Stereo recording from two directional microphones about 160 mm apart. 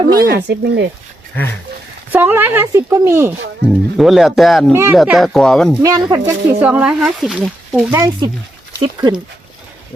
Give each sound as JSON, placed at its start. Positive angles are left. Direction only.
{"t": 0.1, "sound": "speech", "side_deg": -65}
{"t": 2.1, "sound": "speech", "side_deg": -10}
{"t": 3.9, "sound": "speech", "side_deg": 0}
{"t": 4.7, "sound": "speech", "side_deg": -15}
{"t": 5.0, "sound": "speech", "side_deg": 0}
{"t": 5.8, "sound": "speech", "side_deg": -25}
{"t": 7.9, "sound": "speech", "side_deg": -15}
{"t": 8.8, "sound": "speech", "side_deg": -30}